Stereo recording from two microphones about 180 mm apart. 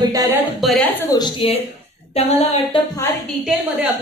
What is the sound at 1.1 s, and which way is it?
A woman's voice, 30° left (ahead or behind).